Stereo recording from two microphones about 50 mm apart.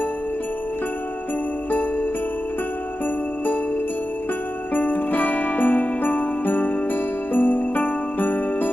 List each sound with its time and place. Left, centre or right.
4.7 s jingle bell: left